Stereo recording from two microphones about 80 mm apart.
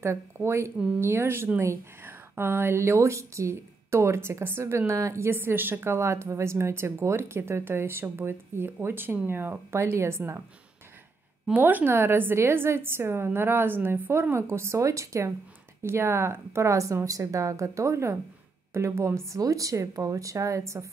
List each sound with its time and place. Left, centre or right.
0.0 s speech: right
11.4 s a woman's voice: right